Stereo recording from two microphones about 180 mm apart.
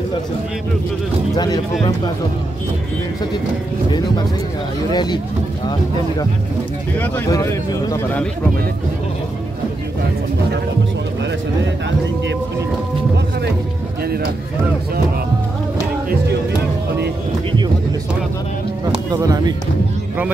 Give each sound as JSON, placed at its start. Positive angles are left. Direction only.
{"t": 1.3, "sound": "speech", "side_deg": 20}
{"t": 4.9, "sound": "speech", "side_deg": 25}
{"t": 7.0, "sound": "speech", "side_deg": 15}
{"t": 19.1, "sound": "speech", "side_deg": -20}